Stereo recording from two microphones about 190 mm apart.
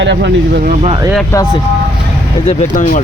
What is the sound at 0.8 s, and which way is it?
Speech, 25° right (ahead or behind).